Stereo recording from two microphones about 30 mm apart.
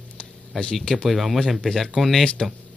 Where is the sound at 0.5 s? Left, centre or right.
Left.